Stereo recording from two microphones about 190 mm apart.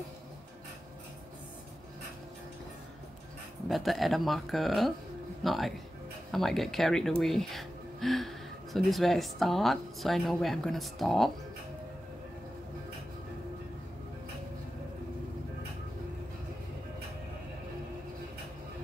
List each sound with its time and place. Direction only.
3.6 s speech: centre (ahead or behind)